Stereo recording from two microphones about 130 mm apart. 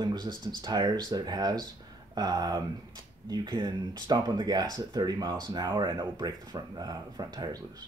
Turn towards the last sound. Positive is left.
turn(degrees=-30)  # may be behind; listen again after turning